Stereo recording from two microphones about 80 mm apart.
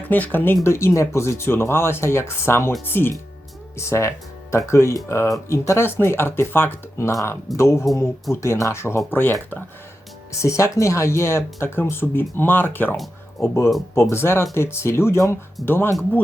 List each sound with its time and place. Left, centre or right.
0.0 s speech: left
7.1 s speech: left
10.4 s speech: left